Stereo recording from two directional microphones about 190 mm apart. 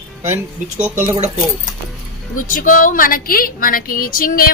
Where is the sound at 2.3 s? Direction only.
45° left (ahead or behind).